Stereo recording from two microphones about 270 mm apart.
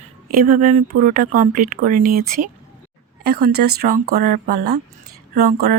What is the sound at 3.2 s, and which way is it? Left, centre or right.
Speech, right.